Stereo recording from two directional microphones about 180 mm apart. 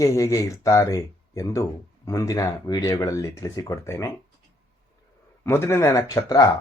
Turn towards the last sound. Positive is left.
turn(degrees=20)  # may be behind; listen again after turning